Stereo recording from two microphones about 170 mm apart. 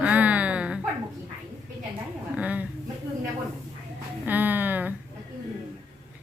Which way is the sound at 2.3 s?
10° right (ahead or behind).